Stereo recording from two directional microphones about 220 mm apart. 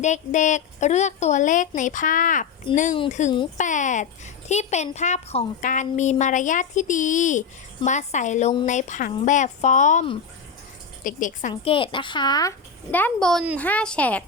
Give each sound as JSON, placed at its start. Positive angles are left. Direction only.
{"t": 0.0, "sound": "a woman's voice", "side_deg": 35}